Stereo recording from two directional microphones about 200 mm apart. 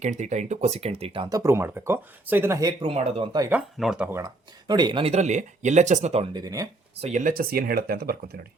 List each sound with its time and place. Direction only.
0.0 s speech: 35° right (ahead or behind)
3.8 s speech: 5° right (ahead or behind)
4.7 s speech: 20° right (ahead or behind)
7.0 s speech: 40° right (ahead or behind)